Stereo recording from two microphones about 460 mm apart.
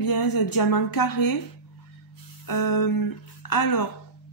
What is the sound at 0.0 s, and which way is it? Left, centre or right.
Speech, left.